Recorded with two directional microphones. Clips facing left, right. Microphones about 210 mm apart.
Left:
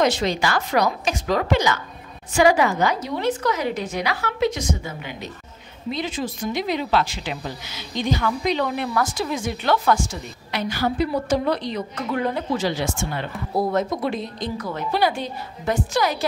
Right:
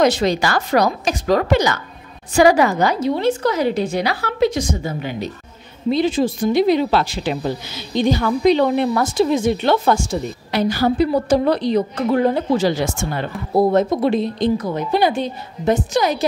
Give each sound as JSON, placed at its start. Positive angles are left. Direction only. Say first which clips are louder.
{"t": 0.0, "sound": "a woman's voice", "louder": "right 4 dB", "side_deg": -40}
{"t": 13.6, "sound": "speech", "louder": "right 7 dB", "side_deg": -30}